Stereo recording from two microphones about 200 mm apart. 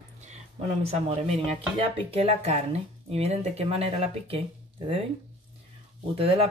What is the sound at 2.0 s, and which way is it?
Speech, 30° right (ahead or behind).